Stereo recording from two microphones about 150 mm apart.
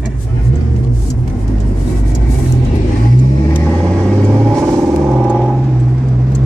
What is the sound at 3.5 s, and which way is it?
Vehicle, 5° left (ahead or behind).